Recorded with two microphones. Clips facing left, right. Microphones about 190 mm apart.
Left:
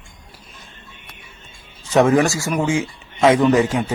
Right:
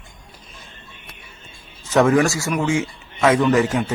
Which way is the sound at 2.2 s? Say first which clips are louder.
Left 1 dB; 15° left (ahead or behind).